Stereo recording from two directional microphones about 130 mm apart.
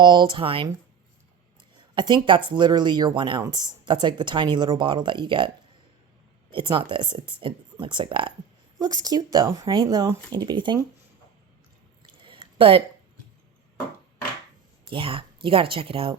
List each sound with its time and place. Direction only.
0.0 s speech: 35° right (ahead or behind)
1.7 s speech: 35° right (ahead or behind)
6.5 s speech: 40° right (ahead or behind)
8.8 s speech: 30° right (ahead or behind)
12.1 s a sound: 40° right (ahead or behind)
14.8 s speech: 45° right (ahead or behind)